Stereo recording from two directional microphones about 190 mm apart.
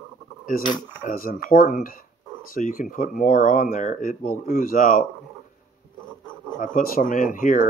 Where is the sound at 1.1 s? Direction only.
50° left (ahead or behind).